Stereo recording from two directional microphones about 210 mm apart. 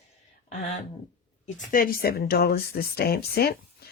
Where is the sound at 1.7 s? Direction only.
40° left (ahead or behind).